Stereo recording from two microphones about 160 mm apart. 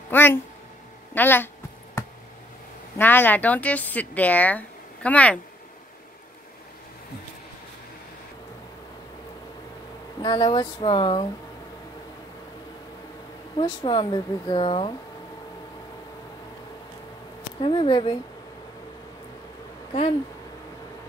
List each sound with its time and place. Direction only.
0.1 s speech: 15° left (ahead or behind)
3.0 s speech: 10° left (ahead or behind)
10.2 s speech: 30° left (ahead or behind)
13.6 s speech: 30° left (ahead or behind)
17.6 s speech: 30° left (ahead or behind)
19.9 s speech: 40° left (ahead or behind)